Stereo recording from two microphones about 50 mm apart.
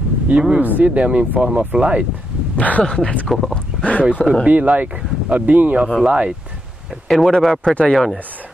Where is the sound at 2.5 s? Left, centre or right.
Left.